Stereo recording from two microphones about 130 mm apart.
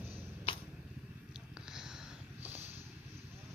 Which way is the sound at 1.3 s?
5° right (ahead or behind).